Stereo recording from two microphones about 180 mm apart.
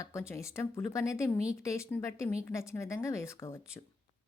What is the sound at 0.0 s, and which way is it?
Speech, 15° left (ahead or behind).